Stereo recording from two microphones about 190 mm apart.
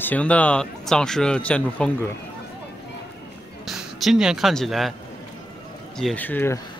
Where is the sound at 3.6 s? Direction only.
Centre (ahead or behind).